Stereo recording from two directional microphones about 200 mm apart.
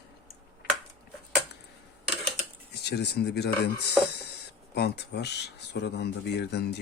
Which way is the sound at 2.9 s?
55° left (ahead or behind).